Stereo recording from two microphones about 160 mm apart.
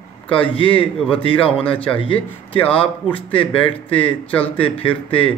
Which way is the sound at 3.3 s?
35° left (ahead or behind).